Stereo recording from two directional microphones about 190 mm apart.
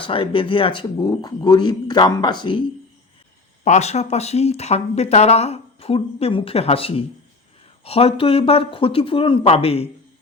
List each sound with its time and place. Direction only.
0.0 s speech: 30° left (ahead or behind)
3.6 s speech: 35° left (ahead or behind)